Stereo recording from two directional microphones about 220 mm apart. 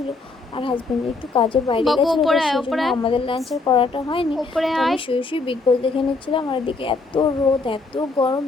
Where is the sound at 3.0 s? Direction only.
25° left (ahead or behind).